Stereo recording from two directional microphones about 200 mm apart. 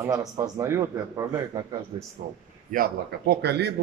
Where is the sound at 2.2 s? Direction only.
45° right (ahead or behind).